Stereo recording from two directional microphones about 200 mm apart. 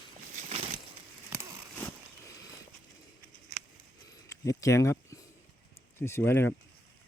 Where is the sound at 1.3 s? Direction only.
15° right (ahead or behind).